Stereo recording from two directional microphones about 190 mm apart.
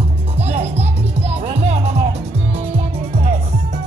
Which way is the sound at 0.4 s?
35° right (ahead or behind).